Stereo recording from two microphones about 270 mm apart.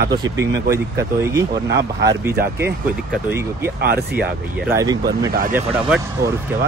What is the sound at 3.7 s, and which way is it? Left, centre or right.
Speech, right.